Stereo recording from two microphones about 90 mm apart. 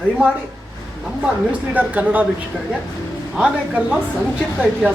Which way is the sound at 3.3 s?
10° right (ahead or behind).